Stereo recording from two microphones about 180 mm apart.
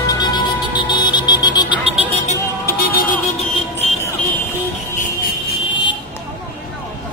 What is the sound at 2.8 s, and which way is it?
Vehicle, 50° left (ahead or behind).